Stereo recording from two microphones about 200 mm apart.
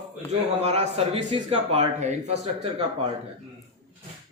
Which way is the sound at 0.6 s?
30° right (ahead or behind).